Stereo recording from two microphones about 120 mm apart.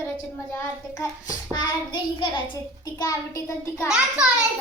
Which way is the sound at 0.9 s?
30° left (ahead or behind).